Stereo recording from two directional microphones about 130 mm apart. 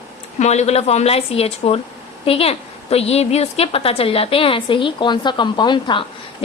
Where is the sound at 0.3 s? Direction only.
60° left (ahead or behind).